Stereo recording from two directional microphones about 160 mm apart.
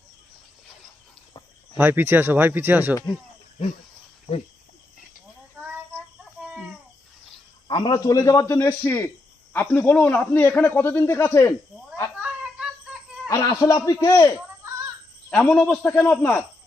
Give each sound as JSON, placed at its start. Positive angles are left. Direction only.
{"t": 1.7, "sound": "speech", "side_deg": -10}
{"t": 7.7, "sound": "a man's voice", "side_deg": 30}
{"t": 12.2, "sound": "synthetic singing", "side_deg": -5}
{"t": 13.2, "sound": "a man's voice", "side_deg": 20}
{"t": 15.3, "sound": "a man's voice", "side_deg": 5}